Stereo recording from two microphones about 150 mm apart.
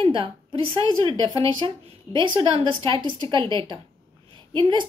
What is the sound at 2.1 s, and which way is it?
A woman's voice, 35° right (ahead or behind).